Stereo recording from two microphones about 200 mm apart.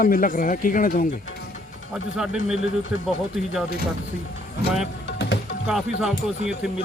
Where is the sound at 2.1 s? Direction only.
5° right (ahead or behind).